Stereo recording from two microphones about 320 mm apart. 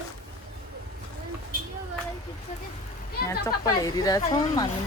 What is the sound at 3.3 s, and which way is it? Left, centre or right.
Speech, centre.